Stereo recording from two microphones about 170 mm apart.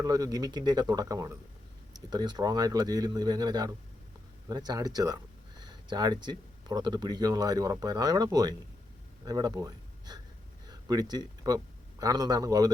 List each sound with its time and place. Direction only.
0.0 s speech: 20° right (ahead or behind)